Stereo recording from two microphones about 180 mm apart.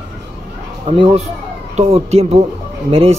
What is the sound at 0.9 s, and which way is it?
Speech, 30° right (ahead or behind).